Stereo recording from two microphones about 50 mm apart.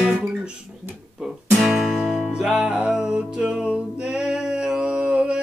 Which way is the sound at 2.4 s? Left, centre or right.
Centre.